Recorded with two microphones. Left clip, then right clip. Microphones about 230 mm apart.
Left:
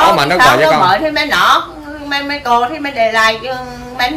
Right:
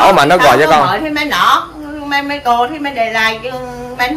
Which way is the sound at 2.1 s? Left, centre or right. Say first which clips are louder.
Even; centre.